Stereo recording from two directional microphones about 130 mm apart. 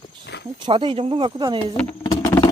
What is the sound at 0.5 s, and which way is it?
Speech, 40° right (ahead or behind).